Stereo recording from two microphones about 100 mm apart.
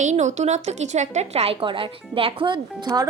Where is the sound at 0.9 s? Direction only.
90° right.